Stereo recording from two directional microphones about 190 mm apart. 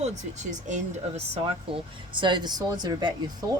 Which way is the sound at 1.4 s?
25° right (ahead or behind).